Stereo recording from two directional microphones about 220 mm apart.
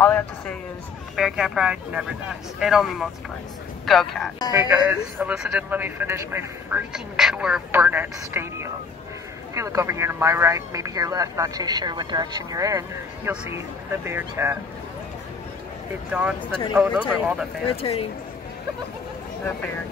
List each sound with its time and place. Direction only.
0.0 s a man's voice: 5° left (ahead or behind); by 14.6 s 10° right (ahead or behind)
16.1 s a man's voice: 5° right (ahead or behind)
17.6 s speech: 25° left (ahead or behind)